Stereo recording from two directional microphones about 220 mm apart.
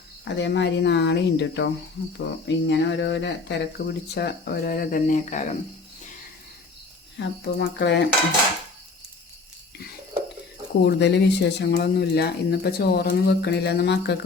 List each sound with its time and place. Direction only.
0.3 s speech: 55° left (ahead or behind)
3.8 s speech: 40° left (ahead or behind)
7.2 s speech: 50° left (ahead or behind)
10.8 s speech: 50° left (ahead or behind)